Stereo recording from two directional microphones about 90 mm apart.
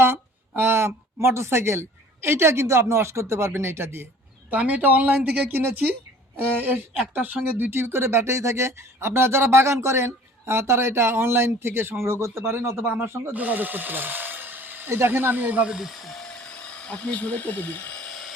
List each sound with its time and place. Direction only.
0.0 s speech: 25° right (ahead or behind); by 18.0 s 20° left (ahead or behind)